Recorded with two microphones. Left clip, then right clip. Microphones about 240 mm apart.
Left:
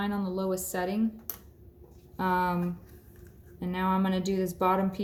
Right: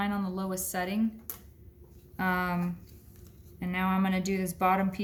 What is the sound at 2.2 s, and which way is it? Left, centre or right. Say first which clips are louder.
Speech: left 3 dB; right.